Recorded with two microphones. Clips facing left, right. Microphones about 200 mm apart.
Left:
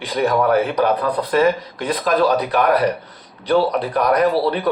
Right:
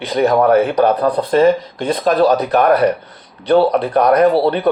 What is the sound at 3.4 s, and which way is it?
Speech, 25° right (ahead or behind).